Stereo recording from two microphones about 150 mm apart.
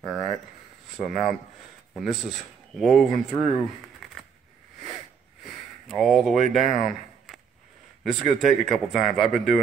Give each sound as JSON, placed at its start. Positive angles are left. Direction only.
{"t": 0.0, "sound": "speech", "side_deg": 0}
{"t": 4.0, "sound": "a sound", "side_deg": 0}
{"t": 4.8, "sound": "sniff", "side_deg": 0}
{"t": 6.5, "sound": "speech", "side_deg": 0}